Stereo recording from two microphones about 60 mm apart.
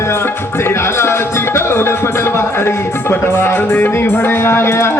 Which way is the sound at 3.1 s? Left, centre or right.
Left.